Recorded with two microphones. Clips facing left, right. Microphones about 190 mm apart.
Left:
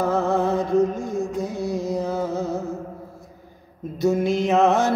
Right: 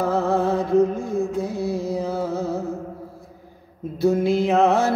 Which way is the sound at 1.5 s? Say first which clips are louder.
Right 1 dB; 30° right (ahead or behind).